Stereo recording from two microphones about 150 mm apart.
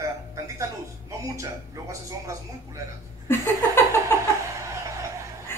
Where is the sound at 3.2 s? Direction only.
15° left (ahead or behind).